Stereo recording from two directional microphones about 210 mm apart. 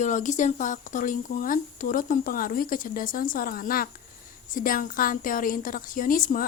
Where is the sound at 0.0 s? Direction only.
35° left (ahead or behind).